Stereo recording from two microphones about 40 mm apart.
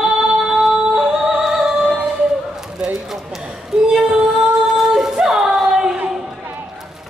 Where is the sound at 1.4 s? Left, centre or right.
Centre.